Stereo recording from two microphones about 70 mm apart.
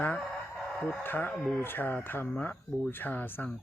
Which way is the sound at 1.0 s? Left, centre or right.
Left.